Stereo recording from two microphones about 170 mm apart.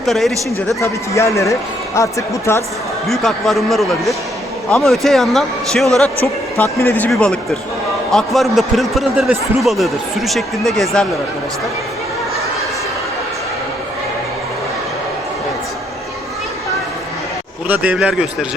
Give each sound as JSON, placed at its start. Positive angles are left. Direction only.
{"t": 0.0, "sound": "a man's voice", "side_deg": 0}
{"t": 0.8, "sound": "speech", "side_deg": 15}
{"t": 3.1, "sound": "a man's voice", "side_deg": 0}
{"t": 6.2, "sound": "a man's voice", "side_deg": 15}
{"t": 17.7, "sound": "speech", "side_deg": -10}